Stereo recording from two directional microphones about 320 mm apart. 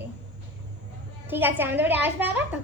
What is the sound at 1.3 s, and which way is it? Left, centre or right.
A woman's voice, centre.